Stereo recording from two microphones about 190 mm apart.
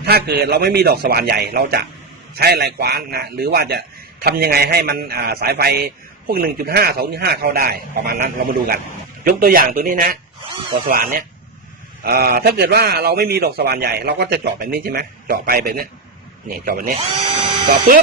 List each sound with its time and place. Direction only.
0.0 s a man's voice: 55° right (ahead or behind)